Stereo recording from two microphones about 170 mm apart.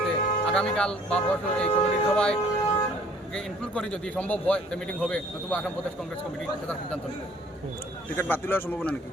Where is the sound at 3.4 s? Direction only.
5° left (ahead or behind).